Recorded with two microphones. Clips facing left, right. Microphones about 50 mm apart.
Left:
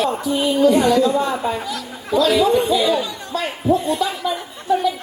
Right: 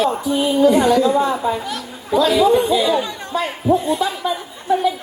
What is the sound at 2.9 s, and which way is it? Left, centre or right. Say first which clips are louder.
Speech: right 1 dB; right.